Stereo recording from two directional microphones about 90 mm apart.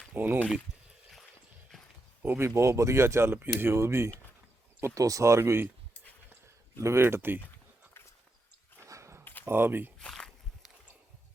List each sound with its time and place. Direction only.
0.1 s speech: 20° right (ahead or behind)
2.2 s speech: 20° right (ahead or behind)
2.6 s speech: 35° right (ahead or behind)
6.7 s speech: 30° right (ahead or behind)
8.8 s a sound: 30° right (ahead or behind)
9.2 s a sound: 20° left (ahead or behind)
9.5 s speech: 25° right (ahead or behind)
10.0 s walk: 10° left (ahead or behind)